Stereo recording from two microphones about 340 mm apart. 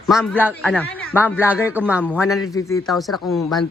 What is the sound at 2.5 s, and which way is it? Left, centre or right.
A man's voice, centre.